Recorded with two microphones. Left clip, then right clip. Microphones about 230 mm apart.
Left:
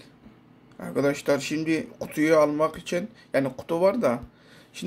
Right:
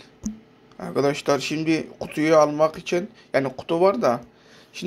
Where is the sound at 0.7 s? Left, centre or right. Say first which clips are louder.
Right 3 dB; centre.